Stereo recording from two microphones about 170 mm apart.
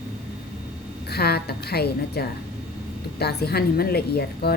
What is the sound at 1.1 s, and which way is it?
A woman's voice, 70° left (ahead or behind).